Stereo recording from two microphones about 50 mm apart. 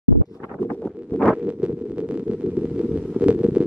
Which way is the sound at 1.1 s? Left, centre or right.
Left.